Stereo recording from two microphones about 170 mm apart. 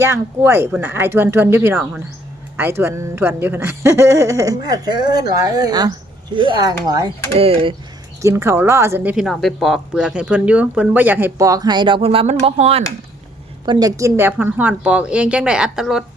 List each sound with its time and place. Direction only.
0.0 s speech: 15° right (ahead or behind)
7.3 s speech: 35° right (ahead or behind)
8.2 s speech: 15° right (ahead or behind)
9.1 s speech: centre (ahead or behind); by 12.8 s 35° right (ahead or behind)
13.7 s speech: 20° right (ahead or behind); by 16.0 s 5° right (ahead or behind)